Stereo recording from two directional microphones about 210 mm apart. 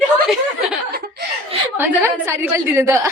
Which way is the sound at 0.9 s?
50° right (ahead or behind).